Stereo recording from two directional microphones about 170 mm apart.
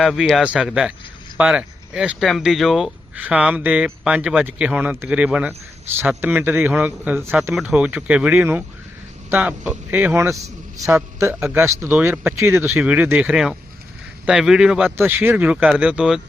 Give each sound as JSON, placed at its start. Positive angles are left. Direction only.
{"t": 0.0, "sound": "speech", "side_deg": 0}